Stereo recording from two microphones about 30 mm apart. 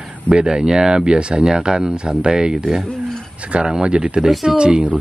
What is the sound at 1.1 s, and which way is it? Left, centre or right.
Speech, right.